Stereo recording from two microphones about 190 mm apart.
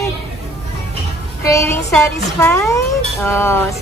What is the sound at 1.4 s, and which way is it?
Speech, 15° left (ahead or behind).